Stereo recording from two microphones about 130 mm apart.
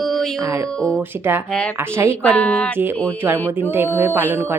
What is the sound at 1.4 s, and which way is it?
Speech, 5° left (ahead or behind).